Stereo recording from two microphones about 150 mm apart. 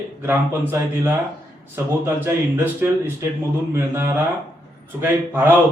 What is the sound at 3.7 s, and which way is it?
A man's voice, 15° right (ahead or behind).